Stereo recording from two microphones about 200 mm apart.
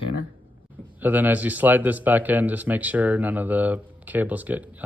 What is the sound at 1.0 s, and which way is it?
Speech, 10° right (ahead or behind).